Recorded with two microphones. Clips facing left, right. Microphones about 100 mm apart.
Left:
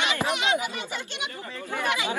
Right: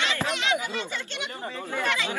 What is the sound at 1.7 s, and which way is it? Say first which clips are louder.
Speech: left 1 dB; 15° left (ahead or behind).